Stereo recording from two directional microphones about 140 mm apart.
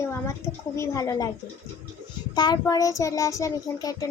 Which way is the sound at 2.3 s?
30° left (ahead or behind).